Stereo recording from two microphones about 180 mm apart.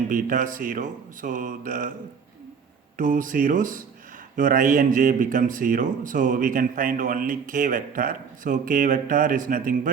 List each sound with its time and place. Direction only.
0.1 s speech: 50° right (ahead or behind)
3.0 s speech: 45° right (ahead or behind)